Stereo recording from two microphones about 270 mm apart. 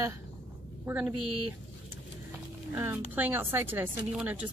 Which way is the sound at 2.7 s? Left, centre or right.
Centre.